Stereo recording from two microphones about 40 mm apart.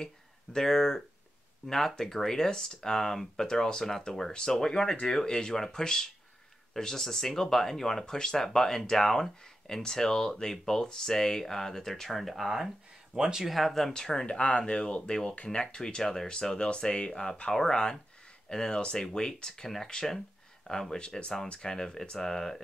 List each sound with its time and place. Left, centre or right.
0.0 s speech: centre
13.1 s speech: centre
13.5 s speech: centre
13.9 s speech: centre
16.0 s speech: centre
16.3 s speech: left